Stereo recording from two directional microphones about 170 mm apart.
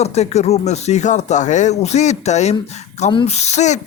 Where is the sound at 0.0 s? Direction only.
40° left (ahead or behind).